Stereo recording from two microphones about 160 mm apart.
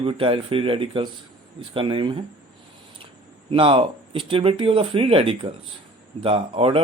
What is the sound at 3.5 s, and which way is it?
Speech, 35° right (ahead or behind).